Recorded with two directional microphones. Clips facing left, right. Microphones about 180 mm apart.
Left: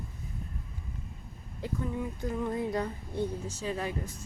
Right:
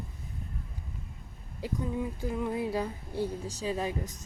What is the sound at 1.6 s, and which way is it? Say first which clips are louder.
Speech: right 1 dB; 20° right (ahead or behind).